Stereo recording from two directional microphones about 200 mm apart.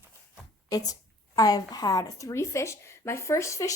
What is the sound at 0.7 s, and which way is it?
A woman's voice, 20° left (ahead or behind).